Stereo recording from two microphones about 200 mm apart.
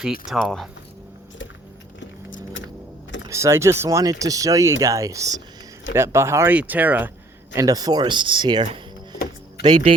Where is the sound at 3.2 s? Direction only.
15° right (ahead or behind).